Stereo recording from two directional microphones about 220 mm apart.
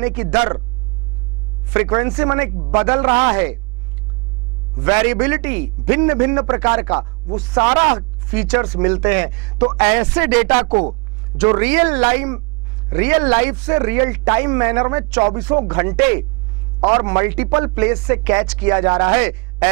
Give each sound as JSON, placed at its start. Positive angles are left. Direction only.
{"t": 0.0, "sound": "speech", "side_deg": -10}
{"t": 1.7, "sound": "speech", "side_deg": -15}
{"t": 2.7, "sound": "a man's voice", "side_deg": -25}
{"t": 4.7, "sound": "a man's voice", "side_deg": -20}
{"t": 8.3, "sound": "speech", "side_deg": -10}
{"t": 10.7, "sound": "a man's voice", "side_deg": -30}
{"t": 11.3, "sound": "a man's voice", "side_deg": -10}
{"t": 18.9, "sound": "a man's voice", "side_deg": -25}
{"t": 19.1, "sound": "a man's voice", "side_deg": -15}